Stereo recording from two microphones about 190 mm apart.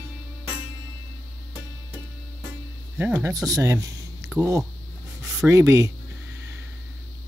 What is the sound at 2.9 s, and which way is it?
Speech, 15° right (ahead or behind).